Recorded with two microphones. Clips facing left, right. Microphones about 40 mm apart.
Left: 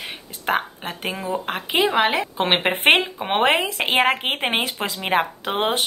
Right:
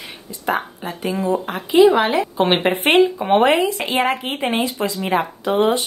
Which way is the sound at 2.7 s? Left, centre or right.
Left.